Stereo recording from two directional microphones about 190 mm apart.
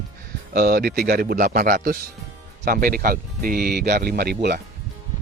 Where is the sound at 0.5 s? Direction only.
55° right (ahead or behind).